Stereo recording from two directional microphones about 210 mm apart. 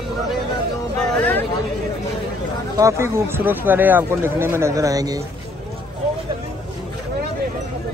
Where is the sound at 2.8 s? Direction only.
15° right (ahead or behind).